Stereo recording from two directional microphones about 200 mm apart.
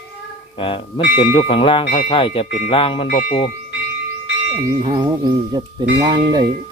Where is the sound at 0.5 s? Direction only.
25° left (ahead or behind).